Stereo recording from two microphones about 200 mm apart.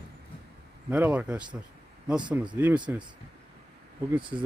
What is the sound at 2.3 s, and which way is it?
Speech, 5° right (ahead or behind).